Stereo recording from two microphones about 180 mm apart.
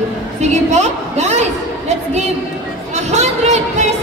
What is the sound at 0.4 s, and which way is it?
A woman's voice, 40° right (ahead or behind).